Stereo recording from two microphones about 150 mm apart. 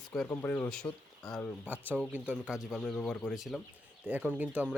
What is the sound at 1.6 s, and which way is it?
Speech, 10° right (ahead or behind).